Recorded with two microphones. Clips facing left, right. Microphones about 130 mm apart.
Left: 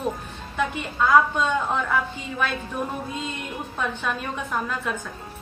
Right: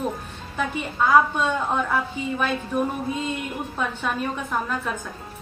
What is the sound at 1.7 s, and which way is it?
A woman's voice, 10° right (ahead or behind).